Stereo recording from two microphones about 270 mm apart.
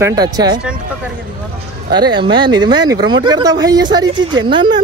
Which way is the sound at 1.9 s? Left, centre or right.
Centre.